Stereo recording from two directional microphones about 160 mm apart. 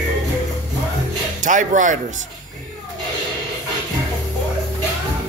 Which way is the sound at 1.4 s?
55° right (ahead or behind).